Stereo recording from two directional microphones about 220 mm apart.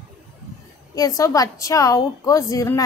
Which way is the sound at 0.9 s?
15° left (ahead or behind).